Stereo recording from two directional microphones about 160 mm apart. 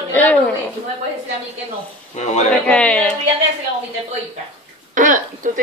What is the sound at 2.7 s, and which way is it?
Speech, 5° left (ahead or behind).